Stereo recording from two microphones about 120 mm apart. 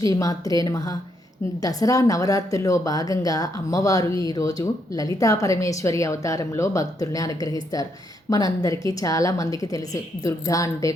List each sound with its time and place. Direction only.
0.0 s a woman's voice: 30° left (ahead or behind)